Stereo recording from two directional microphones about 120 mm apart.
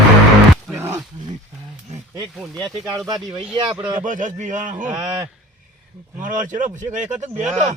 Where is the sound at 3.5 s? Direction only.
45° right (ahead or behind).